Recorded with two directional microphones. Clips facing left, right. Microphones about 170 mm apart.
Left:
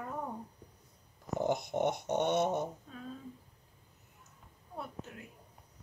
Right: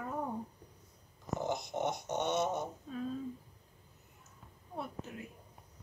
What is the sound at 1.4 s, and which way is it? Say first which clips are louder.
Dog: left 5 dB; 55° left (ahead or behind).